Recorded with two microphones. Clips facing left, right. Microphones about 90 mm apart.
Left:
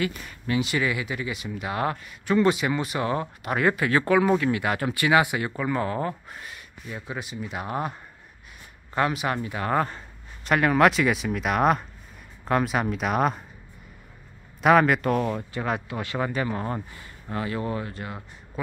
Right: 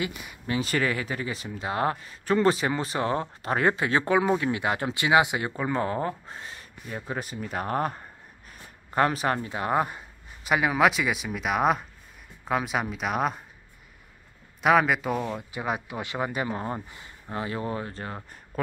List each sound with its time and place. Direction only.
0.0 s speech: 15° right (ahead or behind)
0.5 s speech: 40° right (ahead or behind)
6.9 s speech: 45° right (ahead or behind)
9.6 s speech: 15° right (ahead or behind); by 13.4 s centre (ahead or behind)
14.6 s speech: centre (ahead or behind); by 18.2 s 35° right (ahead or behind)